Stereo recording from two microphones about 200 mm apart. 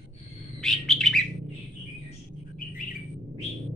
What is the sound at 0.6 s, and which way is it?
Bird, centre (ahead or behind).